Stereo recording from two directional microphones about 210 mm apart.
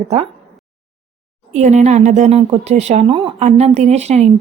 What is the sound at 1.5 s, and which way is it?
A woman's voice, 35° right (ahead or behind).